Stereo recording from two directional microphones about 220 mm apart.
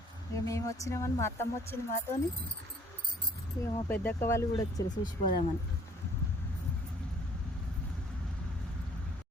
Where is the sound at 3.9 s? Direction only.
10° left (ahead or behind).